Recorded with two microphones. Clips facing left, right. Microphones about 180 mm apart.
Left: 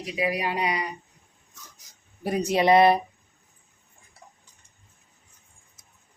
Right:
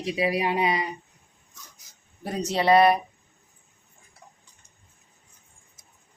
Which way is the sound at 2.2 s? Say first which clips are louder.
Left 3 dB; 10° left (ahead or behind).